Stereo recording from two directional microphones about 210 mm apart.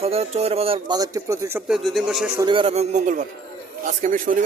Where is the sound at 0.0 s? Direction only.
30° right (ahead or behind); by 2.3 s centre (ahead or behind).